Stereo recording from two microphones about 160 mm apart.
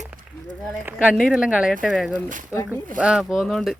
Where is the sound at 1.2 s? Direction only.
Centre (ahead or behind).